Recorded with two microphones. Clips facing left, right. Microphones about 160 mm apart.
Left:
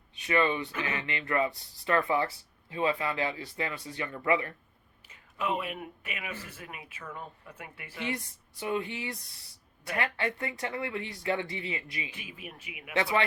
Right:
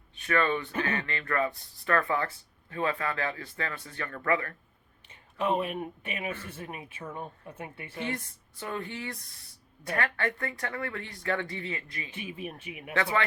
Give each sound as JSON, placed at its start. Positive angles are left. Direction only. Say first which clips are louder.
{"t": 0.1, "sound": "speech", "louder": "even", "side_deg": 20}
{"t": 5.0, "sound": "a sound", "louder": "right 3 dB", "side_deg": -30}
{"t": 5.8, "sound": "speech", "louder": "right 5 dB", "side_deg": -30}
{"t": 8.0, "sound": "speech", "louder": "left 1 dB", "side_deg": 15}
{"t": 12.1, "sound": "a man's voice", "louder": "right 7 dB", "side_deg": -30}
{"t": 12.9, "sound": "speech", "louder": "left 1 dB", "side_deg": 20}